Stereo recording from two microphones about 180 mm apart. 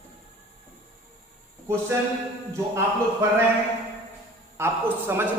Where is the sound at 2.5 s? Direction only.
15° right (ahead or behind).